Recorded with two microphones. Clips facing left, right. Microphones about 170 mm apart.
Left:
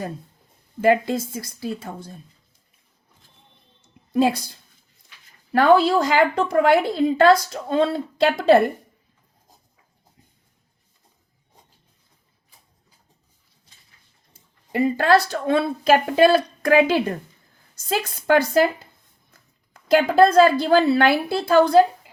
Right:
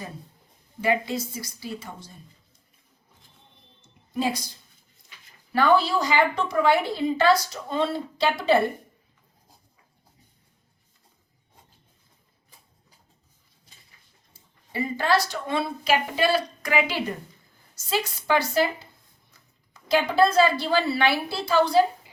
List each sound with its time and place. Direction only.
0.8 s speech: 50° left (ahead or behind)
4.1 s a woman's voice: 60° left (ahead or behind)
5.5 s speech: 55° left (ahead or behind)
14.8 s speech: 55° left (ahead or behind)